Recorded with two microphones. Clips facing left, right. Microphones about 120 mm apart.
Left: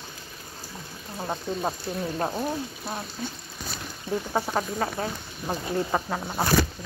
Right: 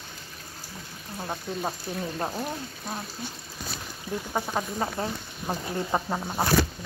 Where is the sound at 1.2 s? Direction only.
15° left (ahead or behind).